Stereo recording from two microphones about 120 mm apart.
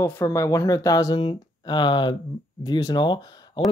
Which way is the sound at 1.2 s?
45° left (ahead or behind).